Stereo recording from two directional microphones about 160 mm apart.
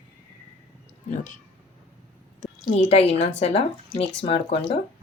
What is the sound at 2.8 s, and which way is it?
A woman's voice, 40° left (ahead or behind).